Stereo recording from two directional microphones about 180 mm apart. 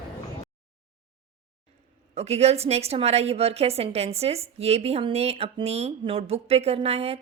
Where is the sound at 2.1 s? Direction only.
35° right (ahead or behind).